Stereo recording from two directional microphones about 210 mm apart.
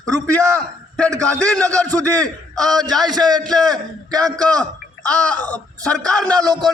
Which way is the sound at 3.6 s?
20° right (ahead or behind).